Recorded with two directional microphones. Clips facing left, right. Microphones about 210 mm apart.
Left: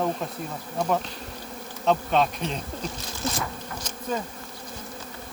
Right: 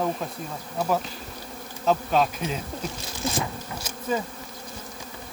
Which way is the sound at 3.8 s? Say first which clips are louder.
Right 2 dB; 5° right (ahead or behind).